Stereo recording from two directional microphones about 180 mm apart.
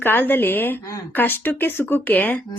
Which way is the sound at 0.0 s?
10° left (ahead or behind).